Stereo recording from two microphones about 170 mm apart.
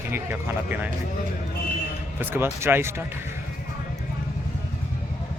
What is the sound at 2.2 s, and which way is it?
Speech, 10° right (ahead or behind).